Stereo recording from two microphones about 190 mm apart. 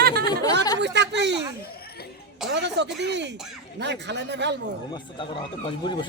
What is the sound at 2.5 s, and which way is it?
Speech, 65° right (ahead or behind).